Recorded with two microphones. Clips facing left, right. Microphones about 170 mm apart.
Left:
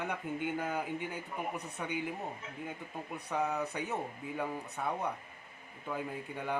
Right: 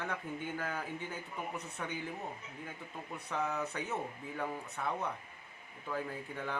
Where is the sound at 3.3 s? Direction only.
15° left (ahead or behind).